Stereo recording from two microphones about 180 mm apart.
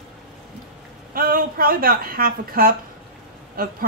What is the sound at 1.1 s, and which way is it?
A woman's voice, 55° right (ahead or behind).